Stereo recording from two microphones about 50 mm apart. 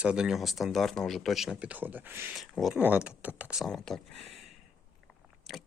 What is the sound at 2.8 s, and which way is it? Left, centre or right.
Speech, right.